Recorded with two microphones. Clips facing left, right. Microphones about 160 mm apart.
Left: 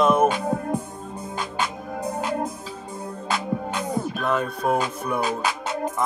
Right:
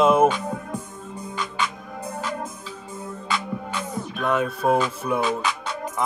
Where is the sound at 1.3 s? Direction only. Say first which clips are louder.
Even; 45° left (ahead or behind).